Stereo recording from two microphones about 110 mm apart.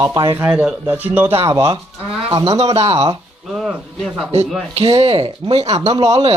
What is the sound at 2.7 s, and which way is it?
Speech, 70° right (ahead or behind).